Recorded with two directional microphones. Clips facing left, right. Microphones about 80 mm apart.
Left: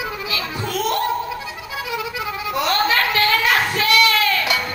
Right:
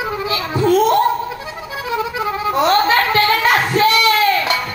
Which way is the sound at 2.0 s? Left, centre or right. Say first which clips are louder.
Right 6 dB; right.